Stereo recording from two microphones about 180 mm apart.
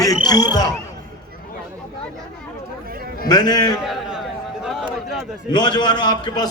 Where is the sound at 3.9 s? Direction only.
5° right (ahead or behind).